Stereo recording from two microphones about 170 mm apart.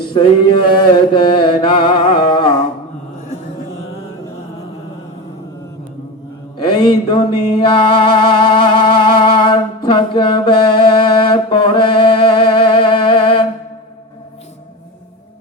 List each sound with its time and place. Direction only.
0.1 s chant: 30° left (ahead or behind)
6.8 s music: 30° left (ahead or behind)